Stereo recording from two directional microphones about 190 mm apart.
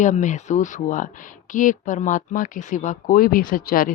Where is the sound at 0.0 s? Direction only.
40° left (ahead or behind).